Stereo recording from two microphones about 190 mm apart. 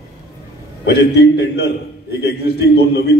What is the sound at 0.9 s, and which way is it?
A man's voice, 60° left (ahead or behind).